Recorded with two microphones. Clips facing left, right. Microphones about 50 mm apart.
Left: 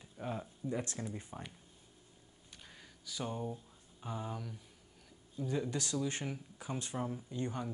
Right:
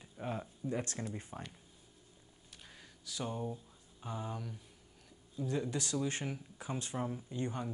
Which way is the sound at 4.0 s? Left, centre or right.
Centre.